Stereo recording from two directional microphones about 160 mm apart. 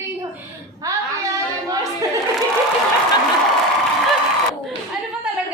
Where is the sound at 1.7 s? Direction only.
20° right (ahead or behind).